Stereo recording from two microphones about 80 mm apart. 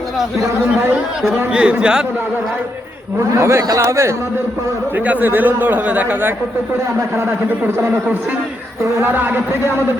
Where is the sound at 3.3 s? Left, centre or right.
Right.